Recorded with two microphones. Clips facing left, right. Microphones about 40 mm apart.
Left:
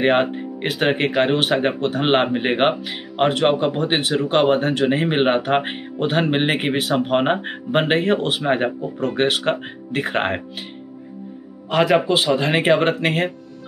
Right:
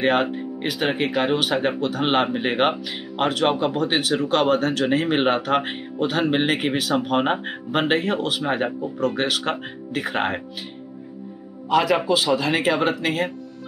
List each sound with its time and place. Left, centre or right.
0.0 s speech: left
11.7 s speech: left